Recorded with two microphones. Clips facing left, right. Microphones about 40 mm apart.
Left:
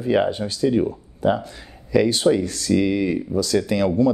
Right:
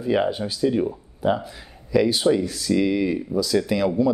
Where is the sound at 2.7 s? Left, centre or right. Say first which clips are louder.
Left 1 dB; centre.